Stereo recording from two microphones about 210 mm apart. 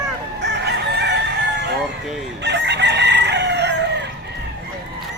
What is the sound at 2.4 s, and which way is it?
Chicken, 55° right (ahead or behind).